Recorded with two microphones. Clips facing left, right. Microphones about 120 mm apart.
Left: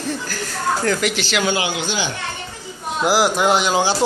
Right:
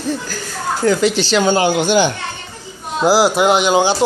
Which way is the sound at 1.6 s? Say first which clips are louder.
Right 9 dB; 50° right (ahead or behind).